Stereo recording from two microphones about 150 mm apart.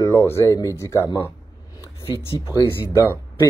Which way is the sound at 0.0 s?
20° left (ahead or behind).